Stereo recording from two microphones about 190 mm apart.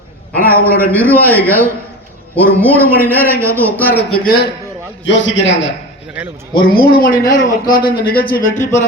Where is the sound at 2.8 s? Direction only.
10° right (ahead or behind).